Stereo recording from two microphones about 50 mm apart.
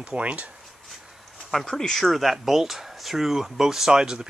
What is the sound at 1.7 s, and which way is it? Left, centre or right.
Speech, centre.